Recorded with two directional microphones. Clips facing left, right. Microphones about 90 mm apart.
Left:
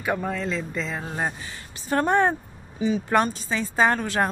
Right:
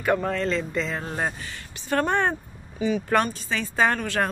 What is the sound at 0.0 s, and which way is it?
Speech, 5° left (ahead or behind).